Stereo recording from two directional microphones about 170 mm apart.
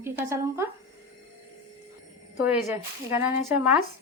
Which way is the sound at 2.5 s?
10° right (ahead or behind).